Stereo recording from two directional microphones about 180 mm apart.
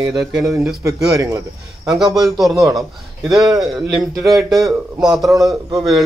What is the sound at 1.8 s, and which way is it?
Speech, centre (ahead or behind).